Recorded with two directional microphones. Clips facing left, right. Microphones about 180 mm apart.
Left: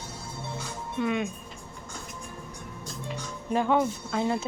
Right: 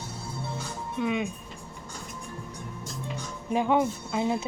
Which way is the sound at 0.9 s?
5° right (ahead or behind).